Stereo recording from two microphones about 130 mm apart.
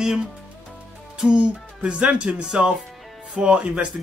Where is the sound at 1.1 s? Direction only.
5° right (ahead or behind).